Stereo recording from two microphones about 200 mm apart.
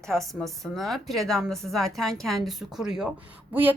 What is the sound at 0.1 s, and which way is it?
A woman's voice, centre (ahead or behind).